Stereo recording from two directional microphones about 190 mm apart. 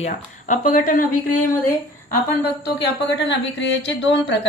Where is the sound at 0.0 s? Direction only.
40° left (ahead or behind).